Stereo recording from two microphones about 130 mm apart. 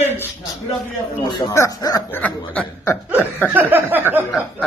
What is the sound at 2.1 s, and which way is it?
Speech, 10° left (ahead or behind).